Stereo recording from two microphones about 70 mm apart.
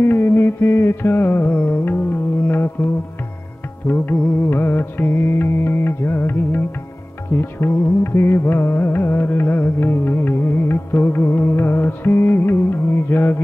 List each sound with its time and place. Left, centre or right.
0.0 s music: left